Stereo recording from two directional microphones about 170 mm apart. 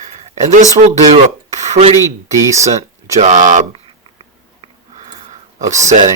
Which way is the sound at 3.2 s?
45° right (ahead or behind).